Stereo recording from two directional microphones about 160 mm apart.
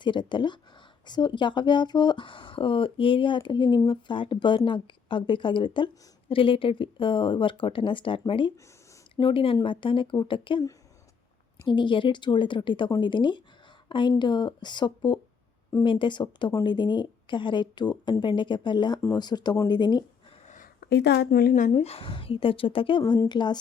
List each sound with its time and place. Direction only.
0.0 s a woman's voice: 30° left (ahead or behind)
20.8 s speech: 90° left; by 21.5 s 70° left (ahead or behind)
21.5 s speech: 45° left (ahead or behind); by 23.6 s 25° left (ahead or behind)